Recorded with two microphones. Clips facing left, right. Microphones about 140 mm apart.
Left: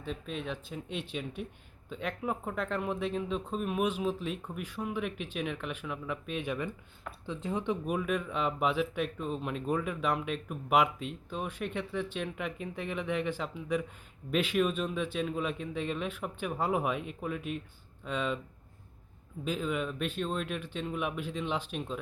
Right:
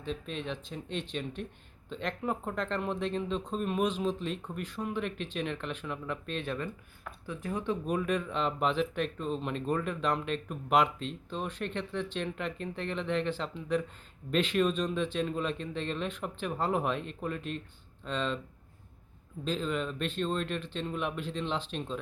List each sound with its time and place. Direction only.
0.0 s speech: 5° left (ahead or behind)
7.9 s speech: 5° left (ahead or behind)
19.5 s speech: 10° left (ahead or behind)